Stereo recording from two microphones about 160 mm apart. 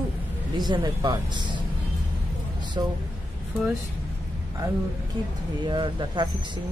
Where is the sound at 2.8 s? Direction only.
30° right (ahead or behind).